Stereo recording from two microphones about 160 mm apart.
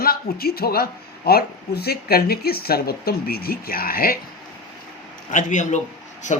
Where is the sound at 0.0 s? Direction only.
70° left (ahead or behind).